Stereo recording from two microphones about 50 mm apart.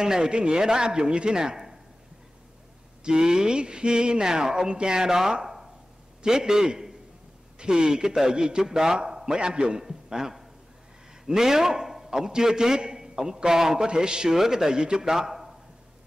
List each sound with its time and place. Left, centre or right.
0.0 s a man's voice: centre
3.0 s a man's voice: centre